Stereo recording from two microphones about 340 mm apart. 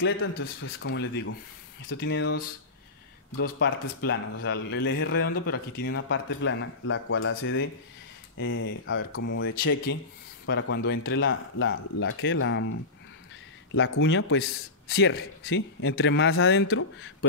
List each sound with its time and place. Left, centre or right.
0.3 s a man's voice: left
13.7 s a man's voice: left